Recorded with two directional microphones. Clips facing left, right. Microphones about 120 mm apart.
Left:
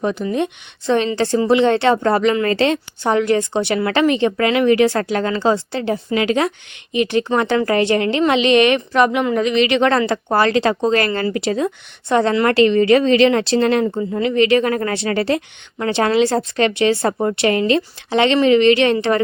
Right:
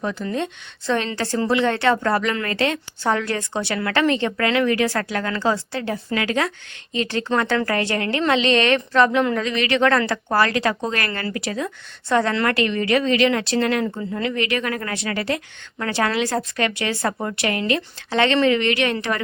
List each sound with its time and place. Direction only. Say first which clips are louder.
0.0 s a woman's voice: left 5 dB; 20° left (ahead or behind)